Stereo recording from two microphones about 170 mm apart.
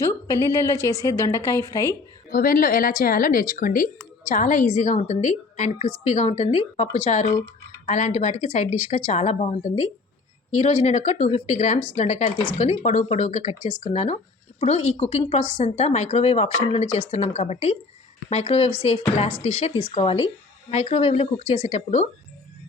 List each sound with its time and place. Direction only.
0.0 s a woman's voice: 15° left (ahead or behind)
2.3 s a woman's voice: 55° left (ahead or behind); by 22.0 s 40° left (ahead or behind)